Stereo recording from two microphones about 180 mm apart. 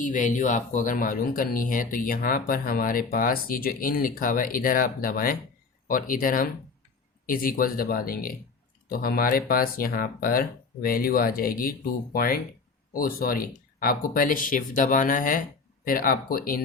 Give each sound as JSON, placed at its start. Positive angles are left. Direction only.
{"t": 0.0, "sound": "speech", "side_deg": 45}